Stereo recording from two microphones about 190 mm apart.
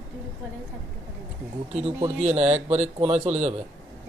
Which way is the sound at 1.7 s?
30° right (ahead or behind).